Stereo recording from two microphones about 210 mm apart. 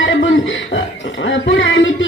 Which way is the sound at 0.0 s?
60° left (ahead or behind).